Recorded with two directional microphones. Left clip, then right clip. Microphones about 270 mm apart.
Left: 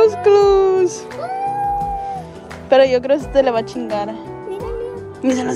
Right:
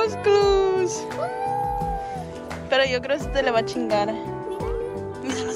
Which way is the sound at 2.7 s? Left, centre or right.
Centre.